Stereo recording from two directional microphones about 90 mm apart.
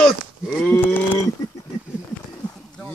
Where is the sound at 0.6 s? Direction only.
20° left (ahead or behind).